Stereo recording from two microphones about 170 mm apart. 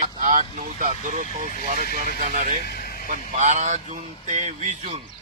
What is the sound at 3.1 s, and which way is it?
Speech, 45° right (ahead or behind).